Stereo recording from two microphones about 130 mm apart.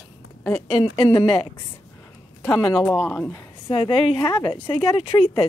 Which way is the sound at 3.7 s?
45° left (ahead or behind).